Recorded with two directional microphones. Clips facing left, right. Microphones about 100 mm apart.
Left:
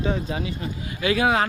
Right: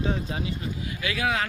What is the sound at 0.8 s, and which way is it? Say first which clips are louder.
Speech: left 7 dB; 30° left (ahead or behind).